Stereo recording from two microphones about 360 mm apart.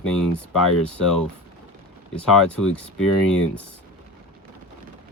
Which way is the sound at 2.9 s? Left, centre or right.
Left.